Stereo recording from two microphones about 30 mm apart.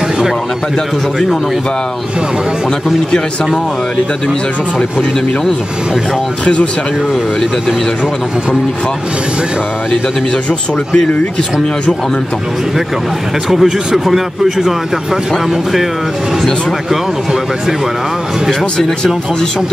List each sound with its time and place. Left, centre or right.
6.4 s speech: left
13.5 s speech: centre
18.5 s speech: centre